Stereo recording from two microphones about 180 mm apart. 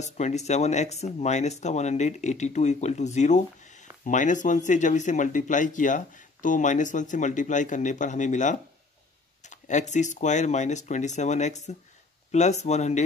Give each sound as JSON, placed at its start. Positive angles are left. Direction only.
{"t": 0.0, "sound": "speech", "side_deg": 40}